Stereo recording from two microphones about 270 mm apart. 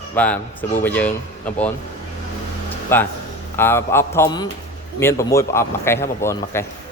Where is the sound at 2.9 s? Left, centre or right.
Centre.